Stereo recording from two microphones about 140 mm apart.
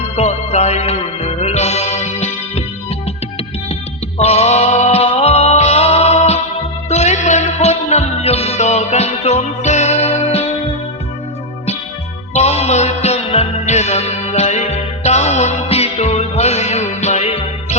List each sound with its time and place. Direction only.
0.2 s music: 50° left (ahead or behind)
4.2 s music: 50° left (ahead or behind)
12.3 s music: 50° left (ahead or behind)